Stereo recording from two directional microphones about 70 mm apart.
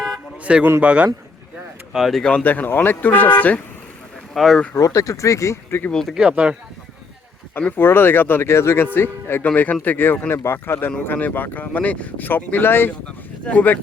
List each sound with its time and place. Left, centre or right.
0.4 s a man's voice: centre
1.9 s speech: centre
2.4 s speech: left
4.4 s speech: centre
4.7 s speech: left
5.9 s speech: centre
6.1 s speech: centre
7.8 s speech: left